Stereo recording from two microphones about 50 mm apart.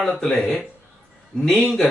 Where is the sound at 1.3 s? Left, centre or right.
Centre.